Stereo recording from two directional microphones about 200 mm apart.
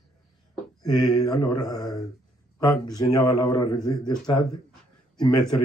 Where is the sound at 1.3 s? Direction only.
20° left (ahead or behind).